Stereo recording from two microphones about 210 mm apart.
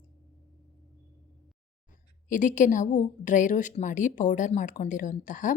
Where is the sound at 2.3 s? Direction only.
35° left (ahead or behind).